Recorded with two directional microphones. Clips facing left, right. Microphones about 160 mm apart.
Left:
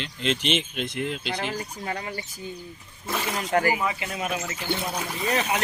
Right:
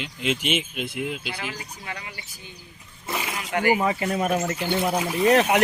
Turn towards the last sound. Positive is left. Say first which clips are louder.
# right 8 dB
turn(degrees=-65)  # may be behind; listen again after turning